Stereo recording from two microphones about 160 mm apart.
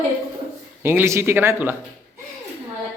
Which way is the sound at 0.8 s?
15° right (ahead or behind).